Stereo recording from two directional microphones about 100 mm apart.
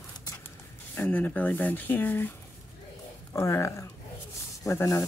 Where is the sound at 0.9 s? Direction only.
15° left (ahead or behind).